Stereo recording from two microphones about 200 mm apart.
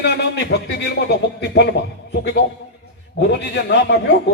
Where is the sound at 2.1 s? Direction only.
55° left (ahead or behind).